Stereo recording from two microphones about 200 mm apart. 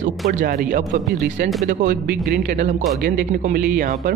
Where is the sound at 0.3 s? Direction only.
45° right (ahead or behind).